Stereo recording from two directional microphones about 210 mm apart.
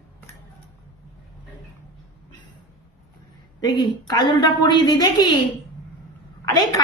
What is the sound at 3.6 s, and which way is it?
A woman's voice, 20° left (ahead or behind).